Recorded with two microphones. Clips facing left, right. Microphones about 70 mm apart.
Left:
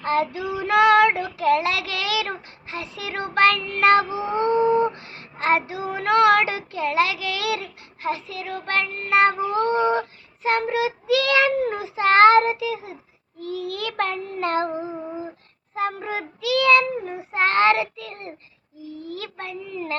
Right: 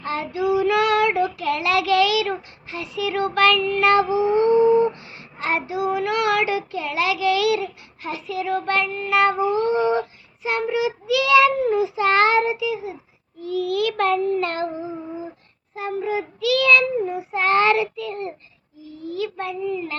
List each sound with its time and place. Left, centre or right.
0.0 s child singing: left
0.5 s female singing: left
1.4 s child singing: left
9.5 s speech: left
13.4 s child singing: left
15.7 s child singing: left
16.4 s child singing: left